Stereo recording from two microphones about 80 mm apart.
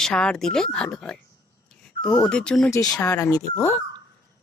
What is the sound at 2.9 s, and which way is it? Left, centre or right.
Speech, left.